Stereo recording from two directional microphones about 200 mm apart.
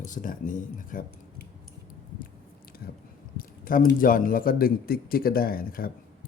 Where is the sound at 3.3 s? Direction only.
45° left (ahead or behind).